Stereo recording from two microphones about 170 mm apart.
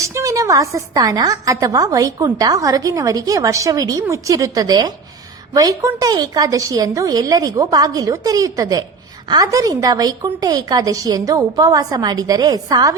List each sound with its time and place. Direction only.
0.1 s a woman's voice: 20° right (ahead or behind)